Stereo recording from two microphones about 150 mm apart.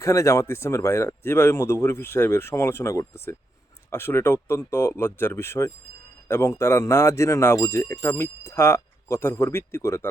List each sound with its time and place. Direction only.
0.0 s speech: 20° left (ahead or behind)